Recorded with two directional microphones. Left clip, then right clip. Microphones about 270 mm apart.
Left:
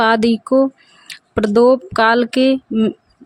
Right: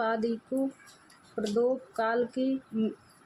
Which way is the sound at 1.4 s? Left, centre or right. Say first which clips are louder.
Left 16 dB; left.